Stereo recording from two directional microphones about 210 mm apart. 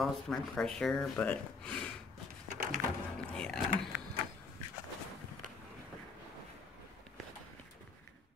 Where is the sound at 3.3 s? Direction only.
5° left (ahead or behind).